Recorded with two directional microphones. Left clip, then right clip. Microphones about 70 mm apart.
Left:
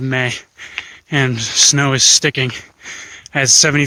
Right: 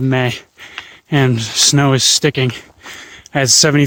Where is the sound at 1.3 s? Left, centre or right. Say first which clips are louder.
Left 1 dB; right.